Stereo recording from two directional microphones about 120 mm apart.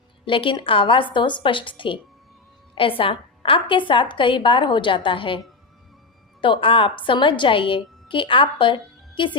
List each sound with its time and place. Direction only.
0.3 s a woman's voice: 45° left (ahead or behind)
6.4 s a woman's voice: 45° left (ahead or behind)